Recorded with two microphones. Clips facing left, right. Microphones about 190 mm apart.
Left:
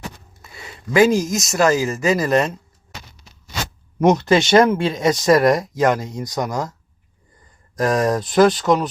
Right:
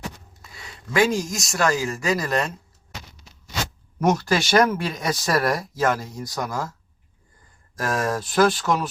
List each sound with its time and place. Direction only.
0.4 s a sound: 25° left (ahead or behind)
1.0 s speech: centre (ahead or behind)
1.5 s speech: 20° left (ahead or behind)
4.0 s speech: 20° left (ahead or behind)
7.9 s speech: 15° left (ahead or behind)